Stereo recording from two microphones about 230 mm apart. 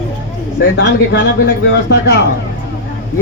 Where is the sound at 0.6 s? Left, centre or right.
Left.